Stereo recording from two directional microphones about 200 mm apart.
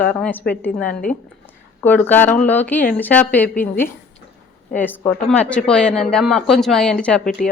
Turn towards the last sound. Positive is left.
turn(degrees=5)  # may be behind; listen again after turning